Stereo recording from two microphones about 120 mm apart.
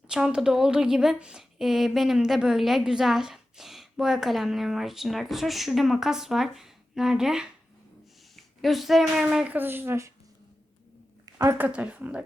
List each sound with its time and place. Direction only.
0.1 s speech: 5° right (ahead or behind)
11.4 s speech: 15° right (ahead or behind)